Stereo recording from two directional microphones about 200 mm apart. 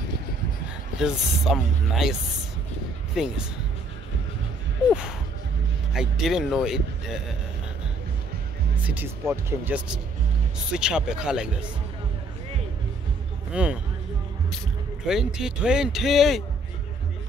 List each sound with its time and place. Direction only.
0.9 s speech: centre (ahead or behind)
3.2 s speech: 5° right (ahead or behind)
5.9 s speech: centre (ahead or behind)
8.8 s speech: 10° right (ahead or behind)
13.5 s speech: 5° right (ahead or behind)
15.0 s speech: 5° right (ahead or behind)